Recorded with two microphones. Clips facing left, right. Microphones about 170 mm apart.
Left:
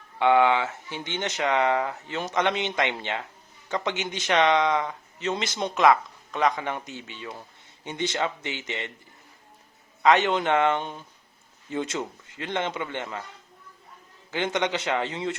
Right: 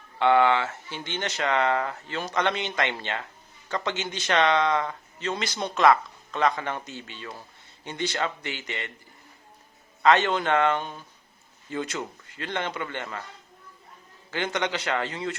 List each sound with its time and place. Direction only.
0.2 s speech: 15° left (ahead or behind)
10.0 s speech: 15° left (ahead or behind)
14.3 s speech: 20° left (ahead or behind)